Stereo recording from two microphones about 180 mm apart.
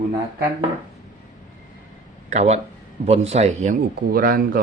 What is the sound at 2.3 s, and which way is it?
Speech, 40° right (ahead or behind).